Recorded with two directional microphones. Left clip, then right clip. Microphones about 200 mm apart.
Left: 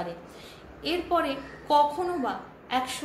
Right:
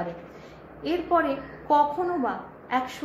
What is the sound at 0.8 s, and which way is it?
Speech, 10° left (ahead or behind).